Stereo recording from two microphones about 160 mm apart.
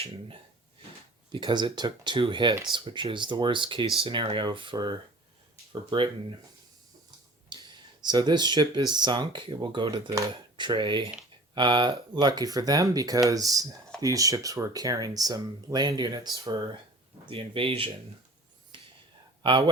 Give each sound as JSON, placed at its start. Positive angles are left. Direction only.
{"t": 0.0, "sound": "speech", "side_deg": -35}
{"t": 7.5, "sound": "speech", "side_deg": -25}
{"t": 18.7, "sound": "whispering", "side_deg": -30}
{"t": 19.4, "sound": "speech", "side_deg": -30}